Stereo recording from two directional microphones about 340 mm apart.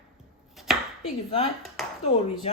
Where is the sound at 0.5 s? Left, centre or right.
Centre.